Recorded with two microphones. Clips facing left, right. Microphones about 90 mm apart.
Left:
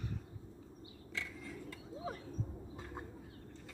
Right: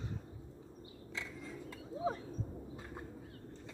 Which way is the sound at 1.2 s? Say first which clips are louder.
Even; 20° right (ahead or behind).